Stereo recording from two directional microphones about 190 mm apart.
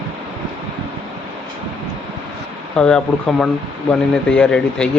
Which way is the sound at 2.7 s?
5° left (ahead or behind).